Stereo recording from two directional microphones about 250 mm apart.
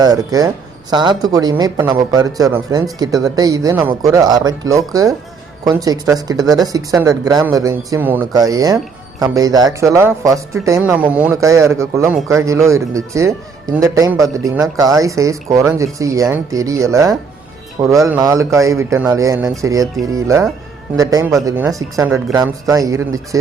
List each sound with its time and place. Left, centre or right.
0.0 s speech: centre